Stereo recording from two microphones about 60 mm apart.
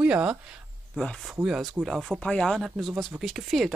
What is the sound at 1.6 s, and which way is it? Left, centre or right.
Speech, centre.